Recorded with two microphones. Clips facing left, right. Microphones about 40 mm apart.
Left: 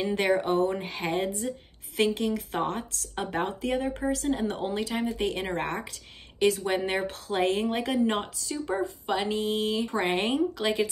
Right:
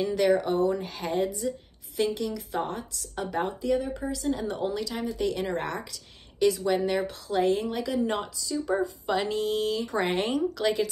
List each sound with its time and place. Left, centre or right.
0.0 s speech: left
4.3 s speech: left
9.1 s speech: centre
9.9 s speech: centre
10.2 s speech: left